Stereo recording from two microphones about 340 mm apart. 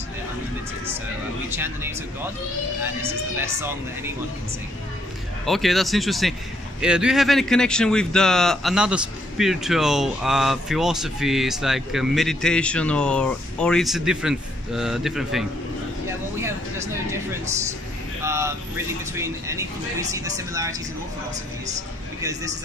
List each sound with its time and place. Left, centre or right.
1.6 s speech: centre
5.4 s speech: centre
16.3 s a sound: centre
18.2 s speech: centre
22.2 s speech: centre